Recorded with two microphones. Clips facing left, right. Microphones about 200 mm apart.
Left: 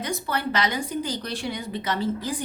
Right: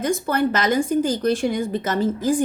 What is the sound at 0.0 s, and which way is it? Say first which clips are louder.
Speech: right 8 dB; 50° right (ahead or behind).